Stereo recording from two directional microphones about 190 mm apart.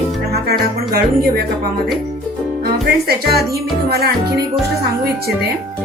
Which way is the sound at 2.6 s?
55° right (ahead or behind).